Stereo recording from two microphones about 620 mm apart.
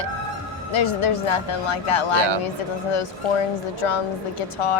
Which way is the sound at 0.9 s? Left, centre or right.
Left.